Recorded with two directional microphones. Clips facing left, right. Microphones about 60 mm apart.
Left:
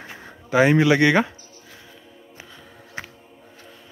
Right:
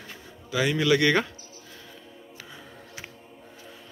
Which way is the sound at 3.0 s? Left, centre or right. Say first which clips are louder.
Left 8 dB; left.